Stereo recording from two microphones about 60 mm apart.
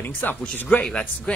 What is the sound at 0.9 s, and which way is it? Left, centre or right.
Speech, centre.